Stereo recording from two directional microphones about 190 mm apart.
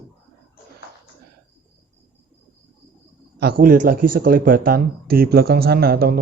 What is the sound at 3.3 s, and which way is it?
Speech, 55° right (ahead or behind).